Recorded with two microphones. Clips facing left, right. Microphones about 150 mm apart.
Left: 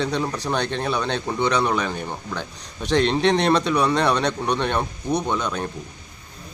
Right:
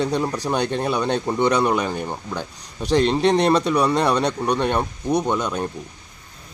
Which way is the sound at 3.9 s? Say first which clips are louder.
Right 1 dB; 10° right (ahead or behind).